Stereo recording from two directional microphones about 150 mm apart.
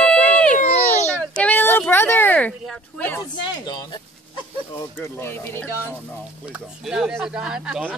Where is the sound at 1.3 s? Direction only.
10° left (ahead or behind).